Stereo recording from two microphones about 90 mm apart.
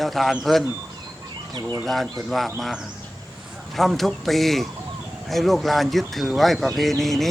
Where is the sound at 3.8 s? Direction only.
Centre (ahead or behind).